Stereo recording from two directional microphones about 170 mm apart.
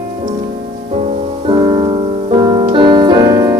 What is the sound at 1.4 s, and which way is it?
Music, 25° right (ahead or behind).